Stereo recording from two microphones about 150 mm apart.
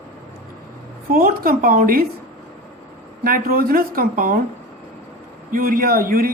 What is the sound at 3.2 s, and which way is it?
Speech, 75° right (ahead or behind).